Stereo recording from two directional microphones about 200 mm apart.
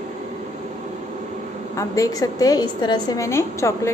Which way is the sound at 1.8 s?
15° left (ahead or behind).